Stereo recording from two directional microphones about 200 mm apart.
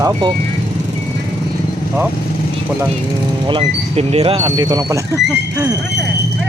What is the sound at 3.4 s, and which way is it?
Speech, 30° right (ahead or behind).